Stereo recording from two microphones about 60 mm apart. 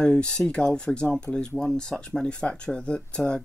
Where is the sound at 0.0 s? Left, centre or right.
Centre.